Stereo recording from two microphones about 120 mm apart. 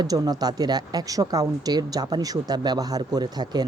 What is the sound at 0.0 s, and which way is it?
Speech, 30° right (ahead or behind).